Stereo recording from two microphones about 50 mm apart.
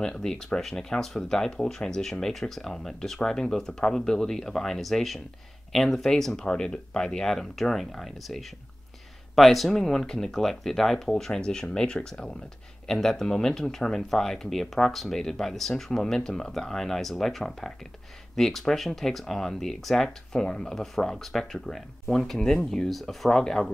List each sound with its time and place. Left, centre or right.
0.0 s speech: centre